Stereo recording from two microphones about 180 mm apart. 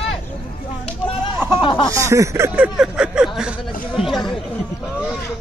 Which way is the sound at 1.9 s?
15° right (ahead or behind).